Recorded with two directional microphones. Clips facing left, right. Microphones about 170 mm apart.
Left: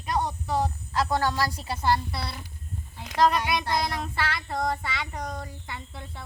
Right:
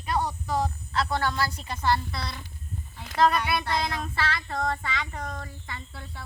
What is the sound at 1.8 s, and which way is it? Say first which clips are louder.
Speech: even; 5° left (ahead or behind).